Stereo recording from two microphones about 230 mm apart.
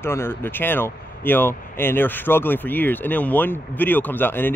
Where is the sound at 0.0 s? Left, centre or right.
Centre.